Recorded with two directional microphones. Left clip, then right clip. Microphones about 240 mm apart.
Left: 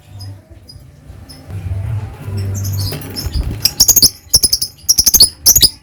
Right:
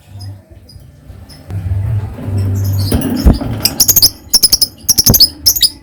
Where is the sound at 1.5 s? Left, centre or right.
Centre.